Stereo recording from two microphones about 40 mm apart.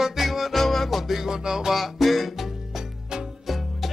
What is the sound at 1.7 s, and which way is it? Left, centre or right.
Music, centre.